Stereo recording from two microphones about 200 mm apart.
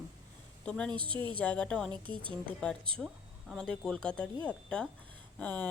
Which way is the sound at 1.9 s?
25° right (ahead or behind).